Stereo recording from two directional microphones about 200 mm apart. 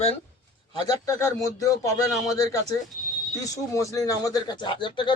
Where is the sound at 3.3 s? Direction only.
15° left (ahead or behind).